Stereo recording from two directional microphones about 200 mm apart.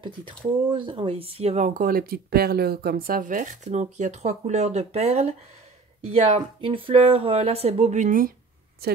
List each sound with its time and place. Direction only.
0.0 s speech: 25° right (ahead or behind); by 8.3 s 40° right (ahead or behind)
8.8 s a woman's voice: 50° right (ahead or behind)